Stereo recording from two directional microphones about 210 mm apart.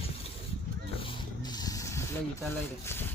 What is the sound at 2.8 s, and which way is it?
Speech, 10° left (ahead or behind).